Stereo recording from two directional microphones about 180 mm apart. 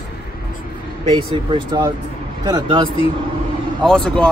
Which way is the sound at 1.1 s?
25° right (ahead or behind).